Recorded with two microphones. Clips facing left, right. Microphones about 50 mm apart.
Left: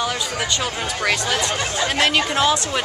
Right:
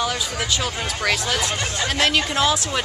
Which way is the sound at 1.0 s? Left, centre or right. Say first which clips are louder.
Left 1 dB; centre.